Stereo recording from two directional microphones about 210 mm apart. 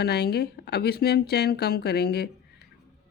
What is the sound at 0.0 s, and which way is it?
Speech, 50° left (ahead or behind).